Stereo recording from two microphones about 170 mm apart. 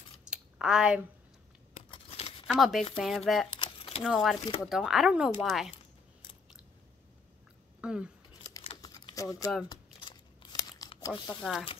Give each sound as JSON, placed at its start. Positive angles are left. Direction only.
{"t": 0.2, "sound": "a sound", "side_deg": -5}
{"t": 1.9, "sound": "tearing", "side_deg": 35}
{"t": 2.4, "sound": "speech", "side_deg": 0}
{"t": 3.4, "sound": "a sound", "side_deg": 30}
{"t": 4.0, "sound": "speech", "side_deg": 0}
{"t": 7.8, "sound": "speech", "side_deg": -5}
{"t": 8.5, "sound": "typing", "side_deg": 20}
{"t": 9.7, "sound": "crumpling", "side_deg": 25}
{"t": 11.0, "sound": "speech", "side_deg": 20}